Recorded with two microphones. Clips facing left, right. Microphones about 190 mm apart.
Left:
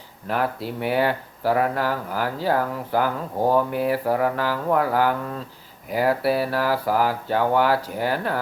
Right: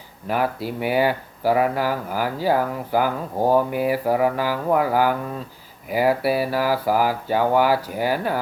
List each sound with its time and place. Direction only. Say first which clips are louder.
0.3 s speech: right 2 dB; 5° right (ahead or behind)